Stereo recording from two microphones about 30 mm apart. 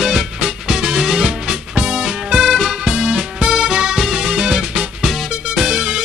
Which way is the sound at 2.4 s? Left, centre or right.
Centre.